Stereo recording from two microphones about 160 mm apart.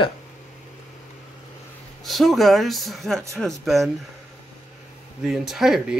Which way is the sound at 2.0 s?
Centre (ahead or behind).